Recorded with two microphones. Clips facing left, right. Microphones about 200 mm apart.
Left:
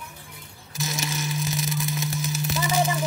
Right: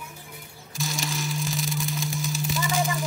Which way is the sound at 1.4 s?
20° left (ahead or behind).